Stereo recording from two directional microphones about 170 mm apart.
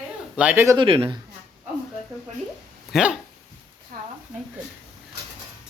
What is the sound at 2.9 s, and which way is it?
Speech, 5° right (ahead or behind).